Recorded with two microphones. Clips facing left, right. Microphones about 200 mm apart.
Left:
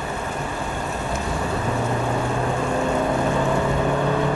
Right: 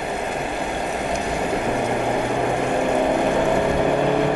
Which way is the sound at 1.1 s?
15° right (ahead or behind).